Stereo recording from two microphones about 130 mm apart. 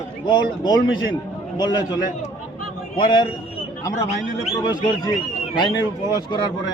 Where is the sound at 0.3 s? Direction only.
35° left (ahead or behind).